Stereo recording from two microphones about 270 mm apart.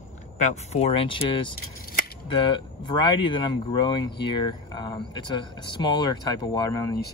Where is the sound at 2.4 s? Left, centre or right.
Centre.